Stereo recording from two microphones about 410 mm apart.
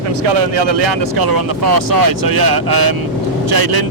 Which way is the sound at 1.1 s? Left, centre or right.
Right.